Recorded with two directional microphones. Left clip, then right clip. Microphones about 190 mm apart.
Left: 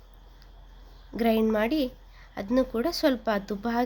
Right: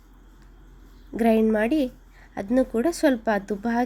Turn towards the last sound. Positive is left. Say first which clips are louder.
# right 3 dB
turn(degrees=-15)  # may be behind; listen again after turning